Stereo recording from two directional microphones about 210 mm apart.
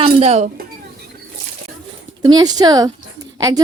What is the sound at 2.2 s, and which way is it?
Speech, 20° right (ahead or behind).